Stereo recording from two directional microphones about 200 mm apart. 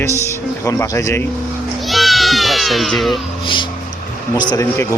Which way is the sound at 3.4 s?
25° left (ahead or behind).